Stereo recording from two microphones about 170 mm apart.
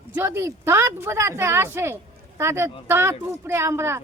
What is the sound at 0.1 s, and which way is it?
Speech, 15° right (ahead or behind).